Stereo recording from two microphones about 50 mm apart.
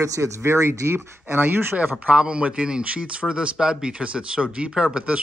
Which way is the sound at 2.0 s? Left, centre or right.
Right.